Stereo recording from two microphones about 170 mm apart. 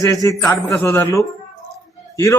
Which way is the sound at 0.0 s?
20° left (ahead or behind).